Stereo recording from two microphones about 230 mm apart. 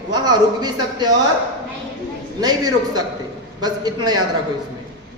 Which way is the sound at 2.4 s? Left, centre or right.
Centre.